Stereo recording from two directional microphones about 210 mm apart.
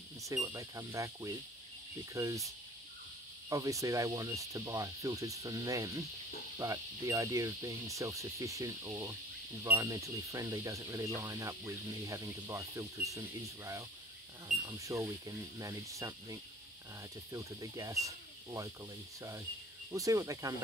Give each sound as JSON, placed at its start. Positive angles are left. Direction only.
{"t": 0.3, "sound": "speech", "side_deg": -15}
{"t": 3.4, "sound": "speech", "side_deg": -15}
{"t": 14.7, "sound": "speech", "side_deg": -15}
{"t": 19.9, "sound": "speech", "side_deg": -15}